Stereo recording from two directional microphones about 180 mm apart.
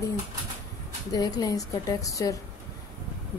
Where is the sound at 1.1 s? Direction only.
20° left (ahead or behind).